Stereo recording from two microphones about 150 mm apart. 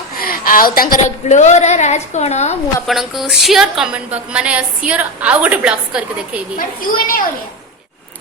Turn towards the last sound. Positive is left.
turn(degrees=70)  # may be behind; listen again after turning